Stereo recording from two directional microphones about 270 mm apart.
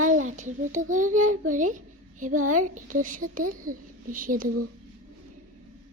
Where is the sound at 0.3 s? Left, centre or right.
Right.